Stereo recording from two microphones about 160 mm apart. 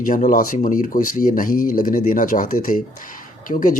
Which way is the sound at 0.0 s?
55° left (ahead or behind).